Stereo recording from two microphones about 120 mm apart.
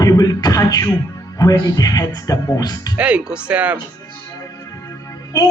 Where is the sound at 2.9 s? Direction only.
10° right (ahead or behind).